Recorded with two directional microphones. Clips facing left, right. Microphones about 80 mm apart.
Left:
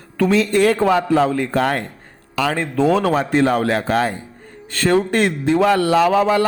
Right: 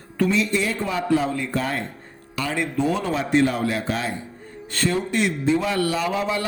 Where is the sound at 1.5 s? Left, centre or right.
Left.